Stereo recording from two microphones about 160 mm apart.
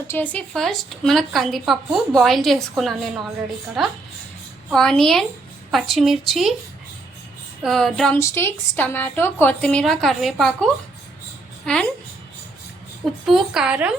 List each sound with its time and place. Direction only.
0.1 s a woman's voice: 10° left (ahead or behind)
7.6 s a woman's voice: centre (ahead or behind)
8.2 s a woman's voice: 15° left (ahead or behind)
13.2 s a woman's voice: centre (ahead or behind)